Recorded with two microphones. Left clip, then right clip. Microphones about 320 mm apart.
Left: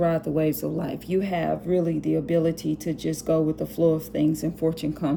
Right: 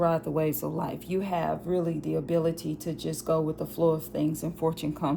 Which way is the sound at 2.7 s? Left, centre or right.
Centre.